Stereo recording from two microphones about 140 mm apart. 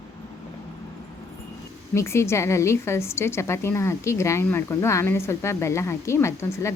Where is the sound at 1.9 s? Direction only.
20° left (ahead or behind).